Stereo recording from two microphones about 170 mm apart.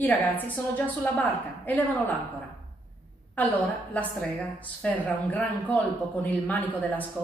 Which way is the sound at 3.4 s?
10° left (ahead or behind).